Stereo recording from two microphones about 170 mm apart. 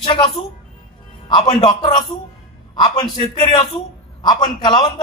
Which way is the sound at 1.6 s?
30° left (ahead or behind).